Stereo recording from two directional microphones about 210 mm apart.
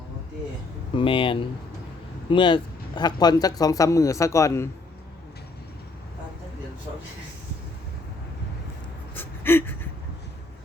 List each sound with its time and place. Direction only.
0.9 s a man's voice: 25° left (ahead or behind)
9.1 s gasp: 10° left (ahead or behind)